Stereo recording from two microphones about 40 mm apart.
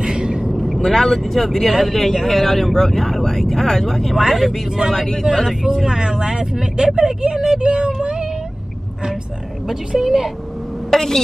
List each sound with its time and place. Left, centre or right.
0.0 s vehicle: centre
0.5 s vehicle: centre
0.7 s speech: centre
4.2 s a woman's voice: centre
4.9 s speech: centre
5.2 s speech: centre
5.9 s speech: centre
7.3 s a sound: centre
9.7 s a woman's voice: centre
10.9 s a woman's voice: centre